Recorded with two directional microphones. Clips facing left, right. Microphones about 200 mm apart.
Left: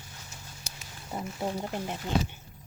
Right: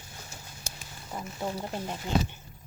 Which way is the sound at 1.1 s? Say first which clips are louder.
Left 2 dB; 5° left (ahead or behind).